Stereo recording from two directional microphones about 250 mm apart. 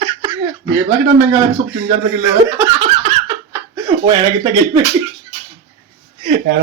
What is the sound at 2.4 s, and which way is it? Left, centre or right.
Laughter, centre.